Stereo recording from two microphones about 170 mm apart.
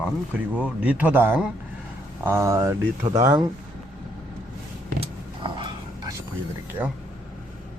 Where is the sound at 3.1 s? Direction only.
20° right (ahead or behind).